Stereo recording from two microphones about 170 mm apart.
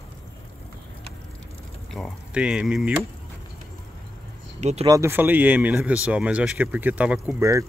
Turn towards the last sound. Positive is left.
turn(degrees=-15)  # may be behind; listen again after turning